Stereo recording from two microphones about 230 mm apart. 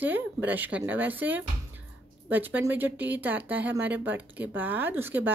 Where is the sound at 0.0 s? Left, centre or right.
Centre.